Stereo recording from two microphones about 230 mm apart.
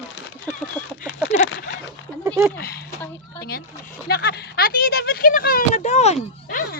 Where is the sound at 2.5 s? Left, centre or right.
Left.